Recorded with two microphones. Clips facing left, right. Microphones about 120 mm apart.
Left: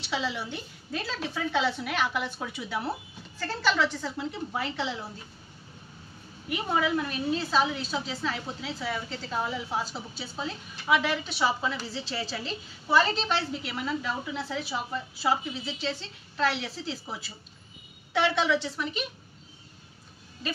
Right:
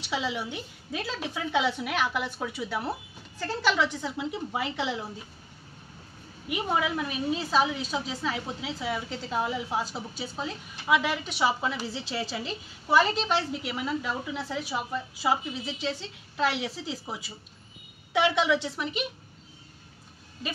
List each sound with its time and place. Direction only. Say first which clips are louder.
0.1 s a woman's voice: right 1 dB; 10° right (ahead or behind)
6.5 s a woman's voice: left 1 dB; 5° right (ahead or behind)